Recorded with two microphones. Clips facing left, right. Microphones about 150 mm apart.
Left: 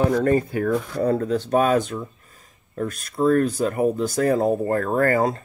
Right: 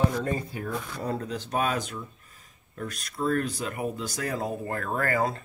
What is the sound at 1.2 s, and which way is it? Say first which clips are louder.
Speech: left 9 dB; 45° left (ahead or behind).